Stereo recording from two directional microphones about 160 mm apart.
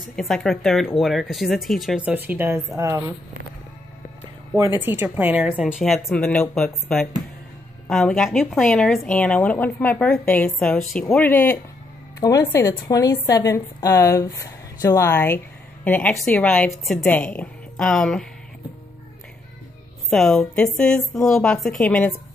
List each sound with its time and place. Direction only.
0.1 s a woman's voice: centre (ahead or behind); by 3.2 s 20° right (ahead or behind)
4.6 s a woman's voice: 15° right (ahead or behind); by 18.2 s 5° left (ahead or behind)
20.1 s a woman's voice: centre (ahead or behind)